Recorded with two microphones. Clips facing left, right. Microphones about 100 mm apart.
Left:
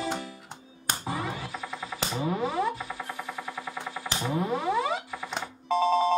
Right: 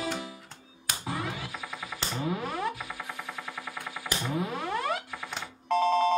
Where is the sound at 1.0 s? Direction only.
Centre (ahead or behind).